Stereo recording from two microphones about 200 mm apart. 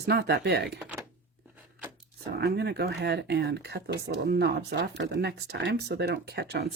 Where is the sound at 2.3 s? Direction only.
55° right (ahead or behind).